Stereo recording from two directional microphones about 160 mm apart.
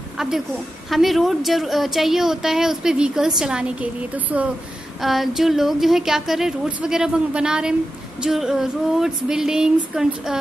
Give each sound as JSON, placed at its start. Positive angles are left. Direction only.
{"t": 0.2, "sound": "a woman's voice", "side_deg": -5}